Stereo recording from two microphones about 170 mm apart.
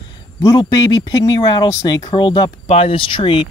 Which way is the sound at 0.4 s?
20° left (ahead or behind).